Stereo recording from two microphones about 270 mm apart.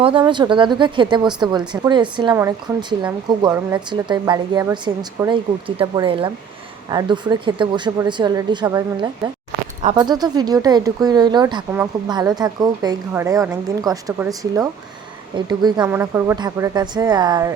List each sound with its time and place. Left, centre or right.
0.0 s speech: centre